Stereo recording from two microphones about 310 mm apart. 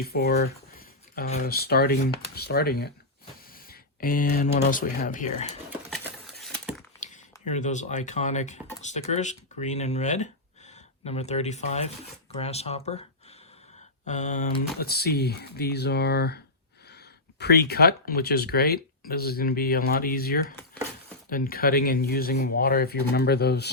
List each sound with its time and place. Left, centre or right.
0.0 s speech: left
5.9 s a sound: centre
7.0 s speech: left
14.1 s speech: left